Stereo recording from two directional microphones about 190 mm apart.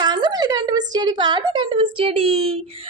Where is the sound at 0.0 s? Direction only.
20° right (ahead or behind).